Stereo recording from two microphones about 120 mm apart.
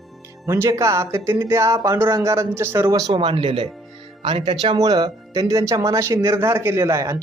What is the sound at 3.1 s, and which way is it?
Speech, 45° right (ahead or behind).